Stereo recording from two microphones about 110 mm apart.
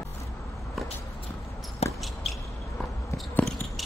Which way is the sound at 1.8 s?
70° left (ahead or behind).